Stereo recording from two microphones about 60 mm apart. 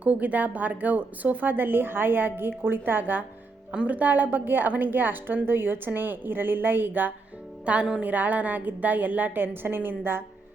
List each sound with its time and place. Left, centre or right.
0.0 s a woman's voice: right
7.6 s a woman's voice: right